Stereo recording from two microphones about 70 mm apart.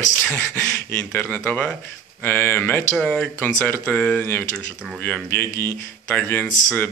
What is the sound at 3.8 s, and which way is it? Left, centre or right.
Speech, centre.